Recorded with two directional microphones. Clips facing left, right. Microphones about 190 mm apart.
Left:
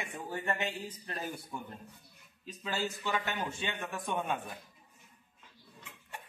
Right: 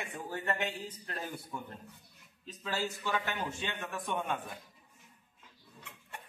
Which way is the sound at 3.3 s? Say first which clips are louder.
Left 1 dB; 10° left (ahead or behind).